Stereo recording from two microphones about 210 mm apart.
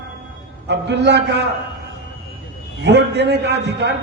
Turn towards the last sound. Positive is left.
turn(degrees=-55)  # may be behind; listen again after turning